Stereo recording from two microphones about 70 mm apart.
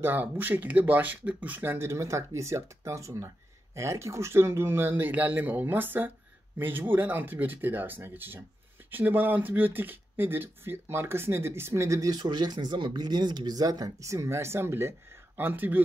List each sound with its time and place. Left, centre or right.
0.0 s speech: right
12.1 s speech: right